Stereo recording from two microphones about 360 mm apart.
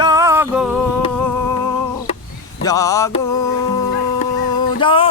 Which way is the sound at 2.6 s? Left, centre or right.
Centre.